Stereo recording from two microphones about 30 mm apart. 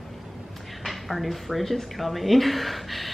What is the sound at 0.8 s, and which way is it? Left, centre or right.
Speech, centre.